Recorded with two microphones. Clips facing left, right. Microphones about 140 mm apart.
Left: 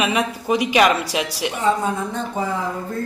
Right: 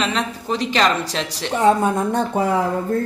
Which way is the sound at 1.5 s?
65° right (ahead or behind).